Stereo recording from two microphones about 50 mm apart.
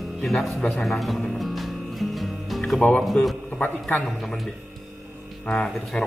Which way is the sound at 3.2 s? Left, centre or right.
Left.